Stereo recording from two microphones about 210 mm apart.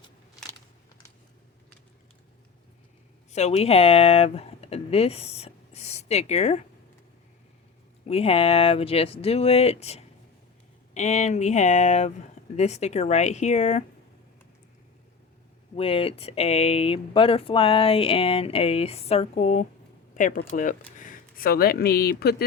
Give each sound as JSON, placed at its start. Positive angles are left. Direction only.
{"t": 3.3, "sound": "speech", "side_deg": 30}
{"t": 8.0, "sound": "speech", "side_deg": 30}
{"t": 15.7, "sound": "speech", "side_deg": 25}